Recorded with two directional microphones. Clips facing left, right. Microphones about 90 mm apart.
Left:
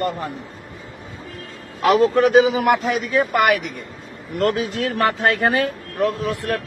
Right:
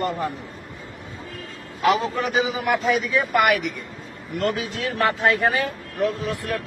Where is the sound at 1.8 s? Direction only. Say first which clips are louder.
Left 6 dB; 60° left (ahead or behind).